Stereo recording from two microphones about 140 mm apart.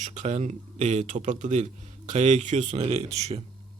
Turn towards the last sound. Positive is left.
turn(degrees=-50)  # may be behind; listen again after turning